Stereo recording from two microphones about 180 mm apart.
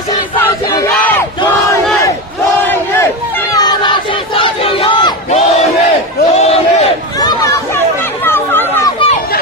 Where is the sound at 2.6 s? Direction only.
10° left (ahead or behind).